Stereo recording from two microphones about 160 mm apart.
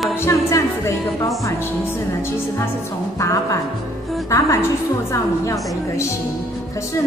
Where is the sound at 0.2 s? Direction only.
15° left (ahead or behind).